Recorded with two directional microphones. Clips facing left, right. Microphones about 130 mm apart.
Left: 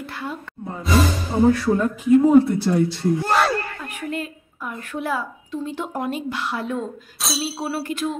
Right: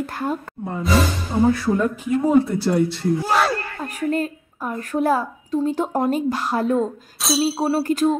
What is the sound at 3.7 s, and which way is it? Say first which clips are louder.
A woman's voice: right 6 dB; 40° right (ahead or behind).